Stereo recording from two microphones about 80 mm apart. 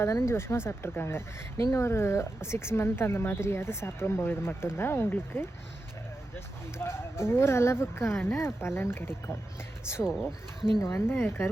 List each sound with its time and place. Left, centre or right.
0.0 s speech: left
6.7 s speech: left
10.0 s speech: centre
10.8 s speech: left